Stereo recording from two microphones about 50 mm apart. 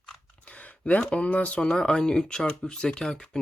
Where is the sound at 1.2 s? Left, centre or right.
Left.